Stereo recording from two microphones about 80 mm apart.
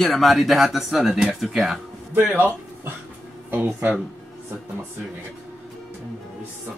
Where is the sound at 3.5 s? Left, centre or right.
Right.